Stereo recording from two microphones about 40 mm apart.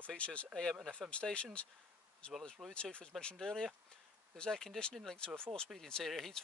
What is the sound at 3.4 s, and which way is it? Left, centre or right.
Speech, centre.